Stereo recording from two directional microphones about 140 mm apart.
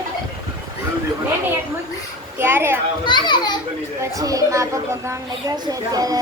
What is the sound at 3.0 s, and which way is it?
Speech, 35° left (ahead or behind).